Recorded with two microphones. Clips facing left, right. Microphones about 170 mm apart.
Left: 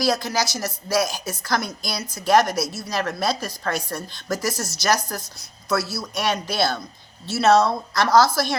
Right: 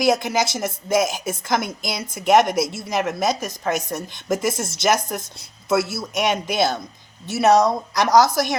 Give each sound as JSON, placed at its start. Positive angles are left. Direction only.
{"t": 0.0, "sound": "a woman's voice", "side_deg": -20}